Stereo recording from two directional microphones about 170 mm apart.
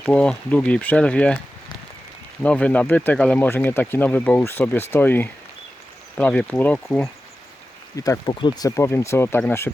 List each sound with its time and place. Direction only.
0.0 s speech: 5° left (ahead or behind)
2.4 s speech: 5° left (ahead or behind)
7.9 s speech: 20° left (ahead or behind)